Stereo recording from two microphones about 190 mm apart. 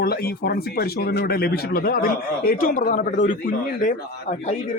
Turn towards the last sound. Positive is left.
turn(degrees=40)  # may be behind; listen again after turning